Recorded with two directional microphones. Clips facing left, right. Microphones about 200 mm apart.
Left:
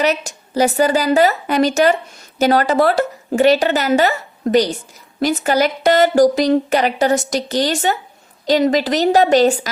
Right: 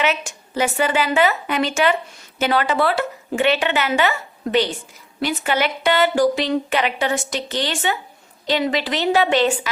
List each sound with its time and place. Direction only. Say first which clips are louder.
0.0 s a woman's voice: left 4 dB; 40° left (ahead or behind)